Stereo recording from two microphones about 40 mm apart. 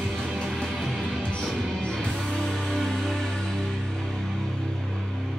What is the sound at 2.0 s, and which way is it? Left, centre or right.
Music, centre.